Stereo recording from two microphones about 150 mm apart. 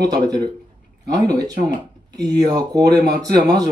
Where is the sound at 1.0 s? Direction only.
25° right (ahead or behind).